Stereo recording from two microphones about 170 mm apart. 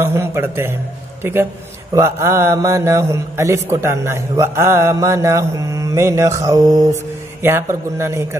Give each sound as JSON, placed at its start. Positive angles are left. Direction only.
{"t": 0.0, "sound": "a man's voice", "side_deg": -15}